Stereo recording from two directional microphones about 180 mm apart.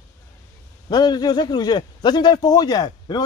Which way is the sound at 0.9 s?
25° left (ahead or behind).